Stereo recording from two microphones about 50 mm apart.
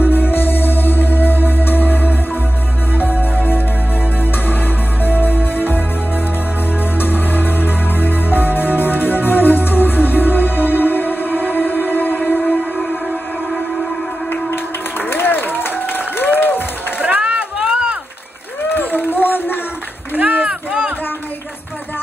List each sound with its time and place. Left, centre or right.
0.0 s music: left
4.2 s music: left
13.5 s train: centre
14.3 s a sound: left
17.2 s a sound: centre
18.7 s run: left
20.2 s run: right